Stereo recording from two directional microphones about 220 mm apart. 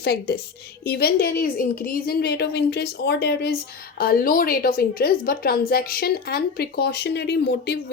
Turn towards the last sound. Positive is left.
turn(degrees=50)  # may be behind; listen again after turning